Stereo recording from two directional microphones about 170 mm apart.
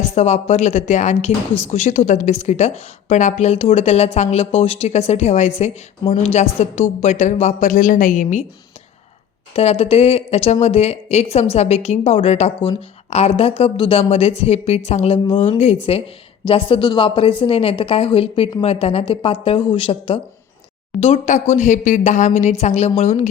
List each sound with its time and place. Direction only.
0.0 s a woman's voice: 45° left (ahead or behind)
9.6 s a woman's voice: 40° left (ahead or behind)